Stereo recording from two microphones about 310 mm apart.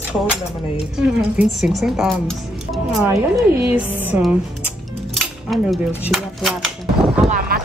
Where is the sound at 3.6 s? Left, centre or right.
Centre.